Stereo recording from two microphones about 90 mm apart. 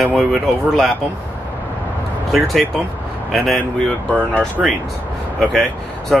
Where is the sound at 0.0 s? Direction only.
Centre (ahead or behind).